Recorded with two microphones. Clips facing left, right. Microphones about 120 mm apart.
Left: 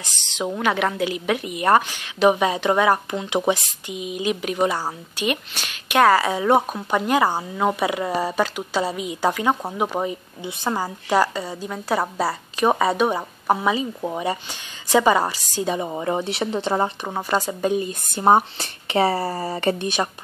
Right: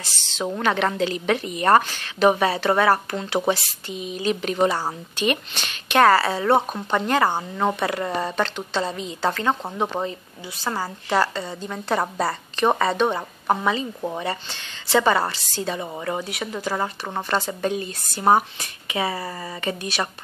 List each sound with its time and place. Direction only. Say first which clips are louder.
0.0 s a woman's voice: left 1 dB; 15° left (ahead or behind)
17.1 s a woman's voice: left 2 dB; 10° left (ahead or behind)
18.2 s speech: left 2 dB; 25° left (ahead or behind)